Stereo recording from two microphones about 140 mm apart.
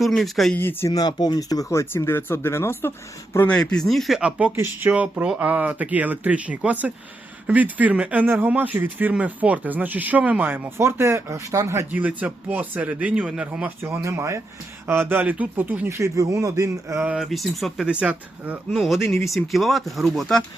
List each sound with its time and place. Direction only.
0.0 s speech: centre (ahead or behind)
0.5 s speech: 15° left (ahead or behind); by 17.1 s 20° right (ahead or behind)
17.1 s speech: centre (ahead or behind)